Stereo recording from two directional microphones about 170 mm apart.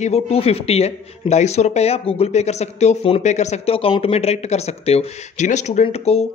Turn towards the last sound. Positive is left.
turn(degrees=35)  # may be behind; listen again after turning